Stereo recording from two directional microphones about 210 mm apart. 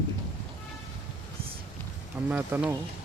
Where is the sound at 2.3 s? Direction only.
10° right (ahead or behind).